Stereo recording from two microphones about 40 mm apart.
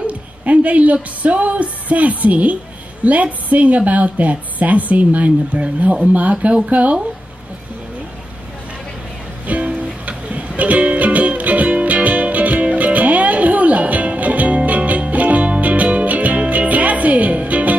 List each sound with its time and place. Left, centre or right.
0.0 s a sound: right
0.9 s a woman's voice: right
9.5 s music: right